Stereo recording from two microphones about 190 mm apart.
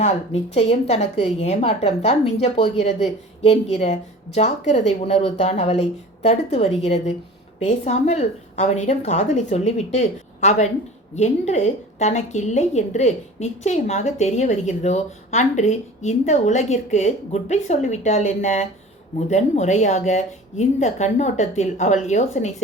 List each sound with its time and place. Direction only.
0.5 s a woman's voice: 35° left (ahead or behind)